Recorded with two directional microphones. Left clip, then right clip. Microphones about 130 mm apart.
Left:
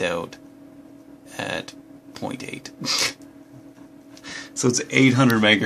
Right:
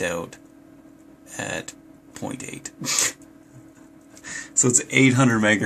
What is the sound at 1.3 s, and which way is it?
Speech, 5° right (ahead or behind).